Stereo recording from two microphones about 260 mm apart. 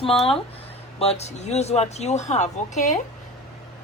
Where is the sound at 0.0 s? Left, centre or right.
Left.